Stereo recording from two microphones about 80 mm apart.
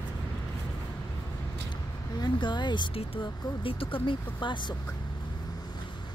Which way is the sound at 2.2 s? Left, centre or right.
Left.